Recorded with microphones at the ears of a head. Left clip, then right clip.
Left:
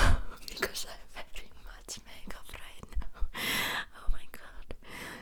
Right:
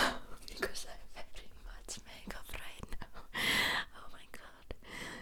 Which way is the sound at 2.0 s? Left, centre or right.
Centre.